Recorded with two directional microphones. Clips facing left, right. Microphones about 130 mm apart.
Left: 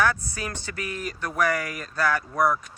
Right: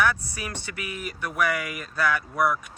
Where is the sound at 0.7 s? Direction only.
35° left (ahead or behind).